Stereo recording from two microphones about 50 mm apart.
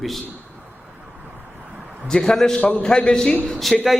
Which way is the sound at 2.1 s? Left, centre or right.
Centre.